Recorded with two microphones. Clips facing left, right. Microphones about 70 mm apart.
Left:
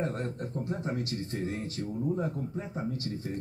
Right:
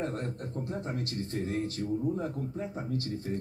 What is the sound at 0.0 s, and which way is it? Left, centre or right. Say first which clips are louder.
Speech: left 1 dB; left.